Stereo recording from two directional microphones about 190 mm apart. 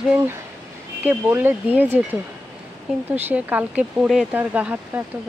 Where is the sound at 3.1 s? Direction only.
10° right (ahead or behind).